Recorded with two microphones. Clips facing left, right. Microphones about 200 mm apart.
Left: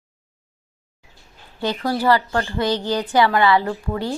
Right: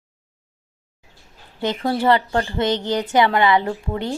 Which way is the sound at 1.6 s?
25° right (ahead or behind).